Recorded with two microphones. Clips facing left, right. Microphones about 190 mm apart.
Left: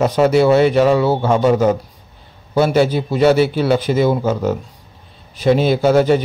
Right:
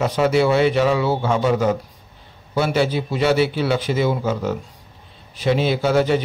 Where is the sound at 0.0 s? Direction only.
45° left (ahead or behind).